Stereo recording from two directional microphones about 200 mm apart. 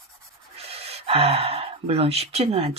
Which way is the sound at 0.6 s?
30° right (ahead or behind).